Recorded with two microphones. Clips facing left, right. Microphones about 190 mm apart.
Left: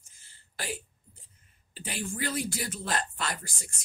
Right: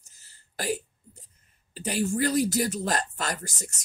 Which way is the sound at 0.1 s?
40° right (ahead or behind).